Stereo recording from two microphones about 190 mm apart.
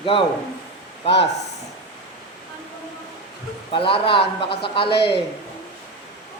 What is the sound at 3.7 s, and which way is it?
Speech, 25° left (ahead or behind).